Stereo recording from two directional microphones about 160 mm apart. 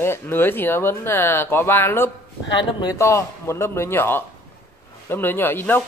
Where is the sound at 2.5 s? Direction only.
25° left (ahead or behind).